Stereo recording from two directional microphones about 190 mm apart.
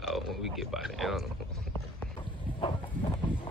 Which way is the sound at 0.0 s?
Centre (ahead or behind).